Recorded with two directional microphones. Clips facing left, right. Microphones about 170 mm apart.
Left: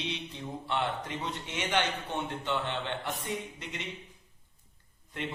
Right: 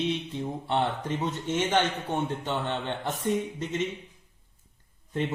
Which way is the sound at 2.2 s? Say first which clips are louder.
Right 3 dB; 40° right (ahead or behind).